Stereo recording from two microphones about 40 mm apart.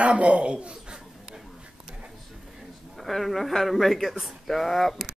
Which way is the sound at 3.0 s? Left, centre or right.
Centre.